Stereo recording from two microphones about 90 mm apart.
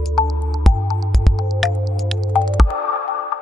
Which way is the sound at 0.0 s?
Centre (ahead or behind).